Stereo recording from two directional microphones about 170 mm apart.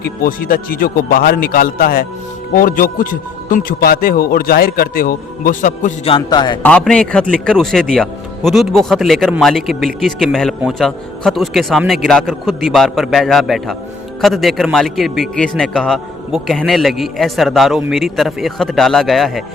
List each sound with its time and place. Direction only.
0.0 s a man's voice: 60° left (ahead or behind)
6.1 s a man's voice: 30° left (ahead or behind)
6.6 s a man's voice: 5° left (ahead or behind)